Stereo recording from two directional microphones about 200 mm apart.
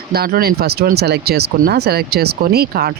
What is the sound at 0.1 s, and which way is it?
Speech, 50° right (ahead or behind).